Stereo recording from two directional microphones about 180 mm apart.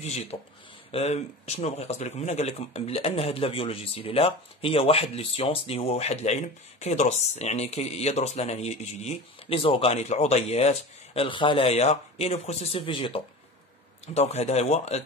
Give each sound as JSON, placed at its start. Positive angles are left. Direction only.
{"t": 0.0, "sound": "speech", "side_deg": 35}